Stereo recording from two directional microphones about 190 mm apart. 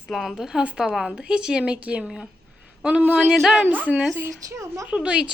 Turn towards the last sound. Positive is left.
turn(degrees=-5)  # may be behind; listen again after turning